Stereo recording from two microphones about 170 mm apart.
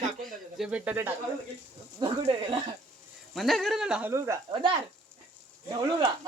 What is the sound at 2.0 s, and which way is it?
Speech, 35° right (ahead or behind).